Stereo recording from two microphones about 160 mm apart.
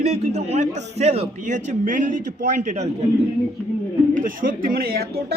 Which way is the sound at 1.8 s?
55° right (ahead or behind).